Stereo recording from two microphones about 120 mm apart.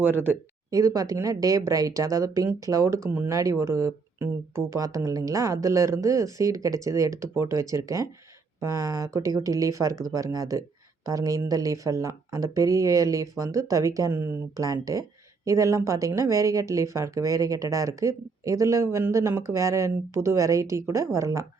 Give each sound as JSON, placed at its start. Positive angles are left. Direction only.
{"t": 0.0, "sound": "speech", "side_deg": -15}
{"t": 0.7, "sound": "speech", "side_deg": -30}